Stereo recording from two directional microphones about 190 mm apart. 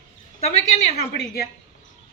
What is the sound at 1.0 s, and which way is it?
Speech, 55° left (ahead or behind).